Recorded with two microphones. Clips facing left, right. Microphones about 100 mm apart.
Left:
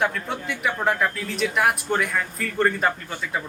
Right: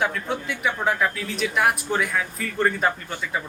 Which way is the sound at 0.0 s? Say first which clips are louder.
Even; centre (ahead or behind).